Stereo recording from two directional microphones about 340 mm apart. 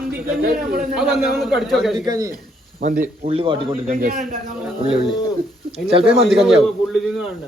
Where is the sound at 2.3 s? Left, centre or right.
Right.